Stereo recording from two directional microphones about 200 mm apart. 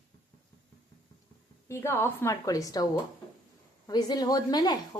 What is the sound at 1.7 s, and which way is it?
A woman's voice, 10° left (ahead or behind).